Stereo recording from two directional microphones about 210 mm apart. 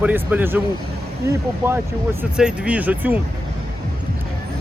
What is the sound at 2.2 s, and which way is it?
Speech, 5° right (ahead or behind).